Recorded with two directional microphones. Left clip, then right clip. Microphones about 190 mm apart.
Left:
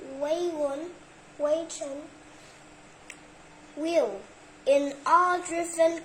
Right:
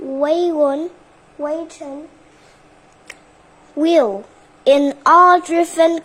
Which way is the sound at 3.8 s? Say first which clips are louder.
Right 12 dB; 60° right (ahead or behind).